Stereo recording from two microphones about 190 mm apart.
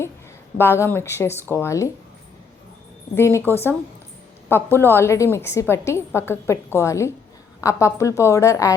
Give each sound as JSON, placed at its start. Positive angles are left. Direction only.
{"t": 0.6, "sound": "a woman's voice", "side_deg": 10}
{"t": 3.2, "sound": "a woman's voice", "side_deg": 15}